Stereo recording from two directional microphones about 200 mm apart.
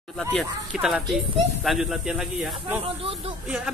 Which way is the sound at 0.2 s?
Centre (ahead or behind).